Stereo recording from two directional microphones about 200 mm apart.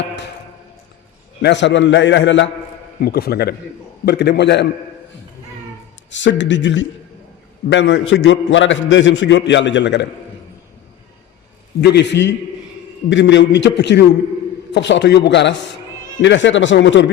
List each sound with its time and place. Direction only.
1.4 s a man's voice: 60° left (ahead or behind)
3.0 s a man's voice: 50° left (ahead or behind)
6.1 s a man's voice: 65° left (ahead or behind)
11.8 s a man's voice: 55° left (ahead or behind)